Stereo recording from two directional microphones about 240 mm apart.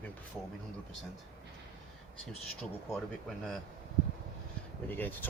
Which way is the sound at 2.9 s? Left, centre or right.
Centre.